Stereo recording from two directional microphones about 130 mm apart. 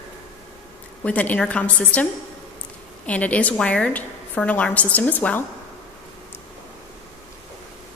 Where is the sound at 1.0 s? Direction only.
10° left (ahead or behind).